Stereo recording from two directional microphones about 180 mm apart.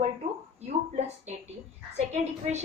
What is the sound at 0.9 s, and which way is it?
Speech, 35° right (ahead or behind).